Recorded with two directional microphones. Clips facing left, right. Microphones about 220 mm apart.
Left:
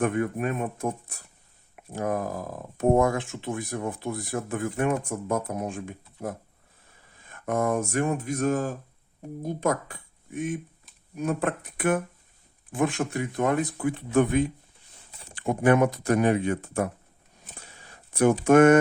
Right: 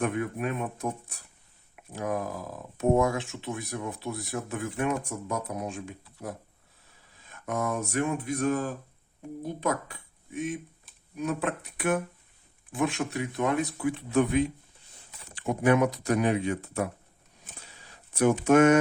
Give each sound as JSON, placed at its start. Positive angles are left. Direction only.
{"t": 0.0, "sound": "speech", "side_deg": 50}
{"t": 18.1, "sound": "speech", "side_deg": 50}